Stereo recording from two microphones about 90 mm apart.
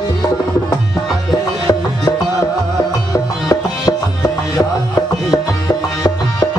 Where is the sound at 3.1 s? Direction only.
40° left (ahead or behind).